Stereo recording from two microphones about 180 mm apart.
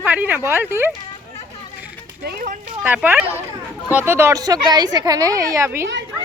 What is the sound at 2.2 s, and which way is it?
Speech, 55° right (ahead or behind).